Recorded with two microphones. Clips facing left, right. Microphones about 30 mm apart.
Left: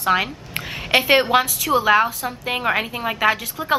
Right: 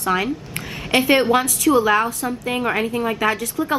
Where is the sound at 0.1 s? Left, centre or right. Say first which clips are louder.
Left 1 dB; left.